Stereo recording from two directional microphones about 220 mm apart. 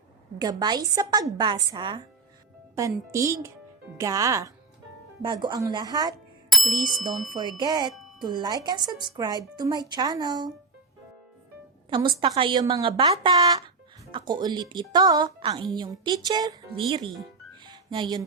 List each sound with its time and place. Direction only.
0.3 s a woman's voice: 20° right (ahead or behind)
6.5 s bicycle bell: centre (ahead or behind)
7.3 s a woman's voice: 20° right (ahead or behind)
11.9 s a woman's voice: 20° right (ahead or behind)